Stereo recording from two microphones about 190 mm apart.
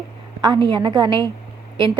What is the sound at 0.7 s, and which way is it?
Speech, 20° right (ahead or behind).